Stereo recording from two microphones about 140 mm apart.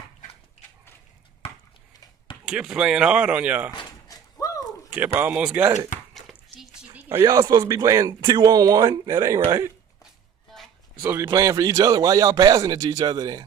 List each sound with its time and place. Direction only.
2.4 s speech: 5° right (ahead or behind)
4.1 s door: 25° left (ahead or behind)
4.9 s speech: 10° right (ahead or behind)
6.1 s dishes: centre (ahead or behind)
7.2 s a man's voice: 25° right (ahead or behind)
11.0 s a man's voice: 25° right (ahead or behind)